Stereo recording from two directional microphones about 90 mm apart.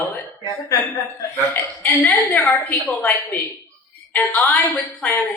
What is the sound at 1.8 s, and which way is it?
A woman's voice, 20° left (ahead or behind).